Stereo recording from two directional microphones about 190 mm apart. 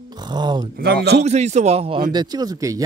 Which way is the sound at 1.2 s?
35° right (ahead or behind).